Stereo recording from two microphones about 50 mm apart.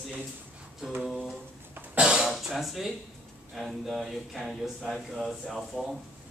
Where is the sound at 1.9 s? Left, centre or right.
Centre.